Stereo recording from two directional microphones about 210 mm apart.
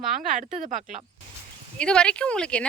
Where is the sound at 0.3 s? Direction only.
35° right (ahead or behind).